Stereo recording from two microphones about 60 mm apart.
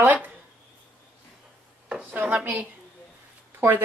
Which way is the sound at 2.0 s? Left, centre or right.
Right.